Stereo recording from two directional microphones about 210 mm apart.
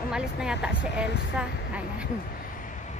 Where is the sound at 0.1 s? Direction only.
5° right (ahead or behind).